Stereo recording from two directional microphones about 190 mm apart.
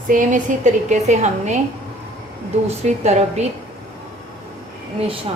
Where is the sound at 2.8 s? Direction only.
35° right (ahead or behind).